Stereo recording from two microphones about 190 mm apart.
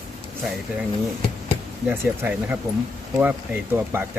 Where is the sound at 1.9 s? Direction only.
10° right (ahead or behind).